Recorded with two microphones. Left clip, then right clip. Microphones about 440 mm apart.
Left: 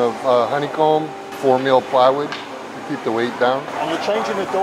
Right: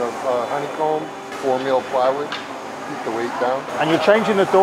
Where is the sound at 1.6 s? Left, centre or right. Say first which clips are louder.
Left 5 dB; left.